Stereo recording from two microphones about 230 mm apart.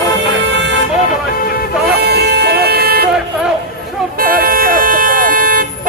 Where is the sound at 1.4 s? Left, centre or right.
Left.